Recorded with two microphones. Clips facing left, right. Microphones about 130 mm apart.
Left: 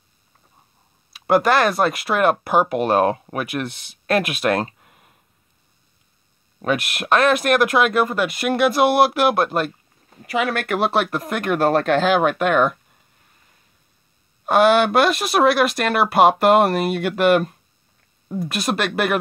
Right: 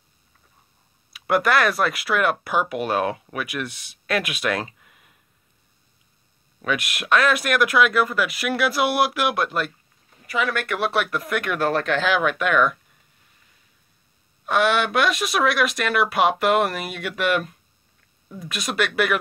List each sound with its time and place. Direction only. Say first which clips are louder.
1.1 s speech: left 4 dB; 30° left (ahead or behind); by 4.7 s 50° left (ahead or behind)
4.7 s a sound: left 3 dB; 40° left (ahead or behind)
6.6 s speech: left 4 dB; 40° left (ahead or behind)
7.8 s speech: left 2 dB; 25° left (ahead or behind)
9.3 s speech: left 5 dB; 40° left (ahead or behind)
10.7 s speech: left 4 dB; 30° left (ahead or behind)
14.4 s speech: left 6 dB; 50° left (ahead or behind)
15.5 s speech: left 4 dB; 30° left (ahead or behind)
16.1 s speech: left 8 dB; 45° left (ahead or behind)
16.6 s speech: left 8 dB; 55° left (ahead or behind)